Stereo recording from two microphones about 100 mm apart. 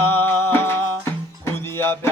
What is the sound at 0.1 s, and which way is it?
Music, 20° left (ahead or behind).